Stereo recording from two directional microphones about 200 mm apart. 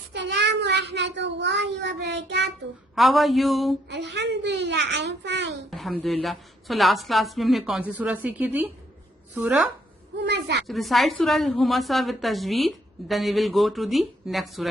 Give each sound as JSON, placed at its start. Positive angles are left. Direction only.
{"t": 0.1, "sound": "a child's voice", "side_deg": -60}
{"t": 2.9, "sound": "a woman's voice", "side_deg": 0}
{"t": 3.8, "sound": "a child's voice", "side_deg": -60}
{"t": 5.7, "sound": "a woman's voice", "side_deg": 5}
{"t": 10.2, "sound": "a child's voice", "side_deg": -60}
{"t": 10.7, "sound": "a woman's voice", "side_deg": 0}